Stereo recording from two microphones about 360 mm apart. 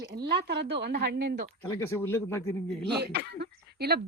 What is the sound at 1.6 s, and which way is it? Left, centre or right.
Speech, centre.